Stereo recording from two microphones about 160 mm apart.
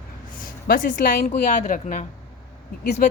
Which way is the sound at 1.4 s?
45° left (ahead or behind).